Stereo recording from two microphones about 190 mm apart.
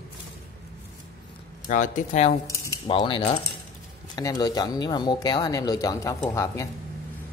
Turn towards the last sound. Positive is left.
turn(degrees=15)  # may be behind; listen again after turning